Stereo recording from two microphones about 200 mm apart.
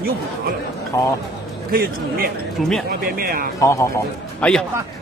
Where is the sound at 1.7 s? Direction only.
50° right (ahead or behind).